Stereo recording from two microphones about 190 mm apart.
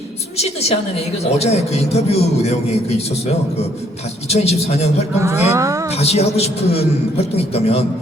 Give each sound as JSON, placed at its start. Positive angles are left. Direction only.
{"t": 0.3, "sound": "speech", "side_deg": 35}
{"t": 4.3, "sound": "speech", "side_deg": 35}
{"t": 5.2, "sound": "speech", "side_deg": -15}
{"t": 5.9, "sound": "speech", "side_deg": 35}